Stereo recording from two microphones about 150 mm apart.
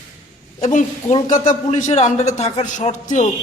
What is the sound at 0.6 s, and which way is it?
A man's voice, 55° left (ahead or behind).